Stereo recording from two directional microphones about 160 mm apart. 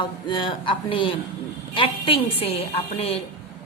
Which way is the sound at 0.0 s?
30° left (ahead or behind).